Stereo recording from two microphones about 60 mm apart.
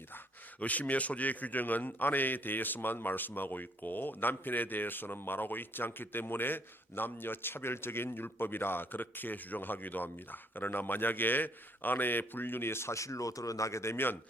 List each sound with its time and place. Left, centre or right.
0.6 s a man's voice: left
13.9 s a man's voice: left